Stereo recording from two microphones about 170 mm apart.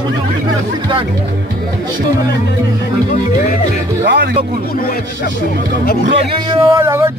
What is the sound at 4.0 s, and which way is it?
Speech, 90° right.